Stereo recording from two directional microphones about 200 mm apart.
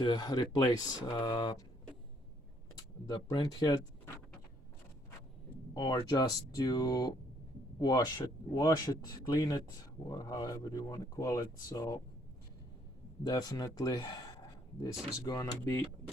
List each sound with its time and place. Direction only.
0.0 s speech: 20° left (ahead or behind)
3.1 s speech: 20° left (ahead or behind)
5.7 s speech: 20° left (ahead or behind)
13.2 s speech: 20° left (ahead or behind)
15.3 s speech: 15° left (ahead or behind)